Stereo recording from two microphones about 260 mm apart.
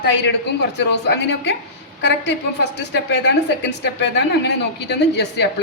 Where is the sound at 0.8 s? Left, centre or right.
Left.